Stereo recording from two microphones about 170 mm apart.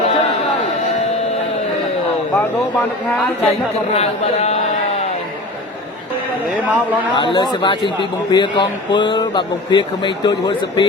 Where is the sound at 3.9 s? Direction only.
40° left (ahead or behind).